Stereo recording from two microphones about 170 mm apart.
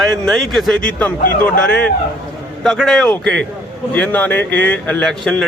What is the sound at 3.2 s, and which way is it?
Speech, 90° right.